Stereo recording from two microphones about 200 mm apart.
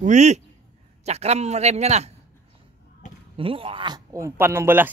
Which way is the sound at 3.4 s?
25° right (ahead or behind).